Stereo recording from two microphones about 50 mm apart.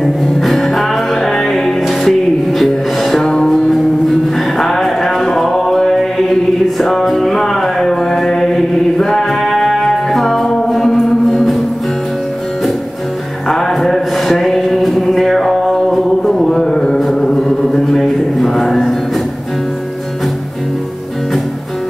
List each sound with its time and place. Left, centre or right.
0.0 s music: centre
13.5 s a sound: centre
17.1 s mantra: centre